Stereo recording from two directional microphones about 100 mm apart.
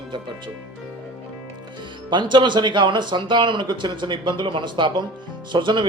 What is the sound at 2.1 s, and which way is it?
Speech, 50° right (ahead or behind).